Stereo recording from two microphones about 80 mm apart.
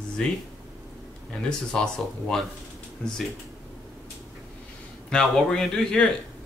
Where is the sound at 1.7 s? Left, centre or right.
Centre.